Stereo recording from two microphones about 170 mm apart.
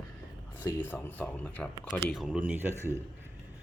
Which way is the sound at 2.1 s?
5° right (ahead or behind).